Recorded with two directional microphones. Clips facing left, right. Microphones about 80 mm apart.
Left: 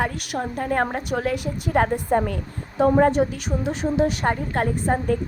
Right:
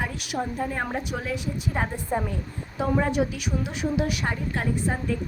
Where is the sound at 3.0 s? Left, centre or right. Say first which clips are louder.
Left 6 dB; left.